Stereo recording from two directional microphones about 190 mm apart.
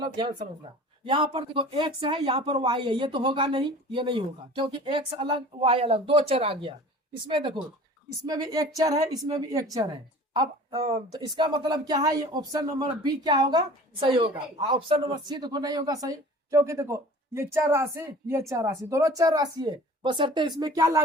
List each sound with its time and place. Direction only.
0.0 s a woman's voice: 20° right (ahead or behind)